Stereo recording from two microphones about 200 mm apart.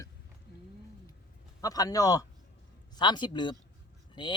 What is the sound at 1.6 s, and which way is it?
Speech, 20° left (ahead or behind).